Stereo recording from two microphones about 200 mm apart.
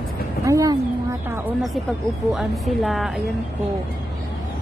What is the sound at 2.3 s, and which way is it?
Speech, centre (ahead or behind).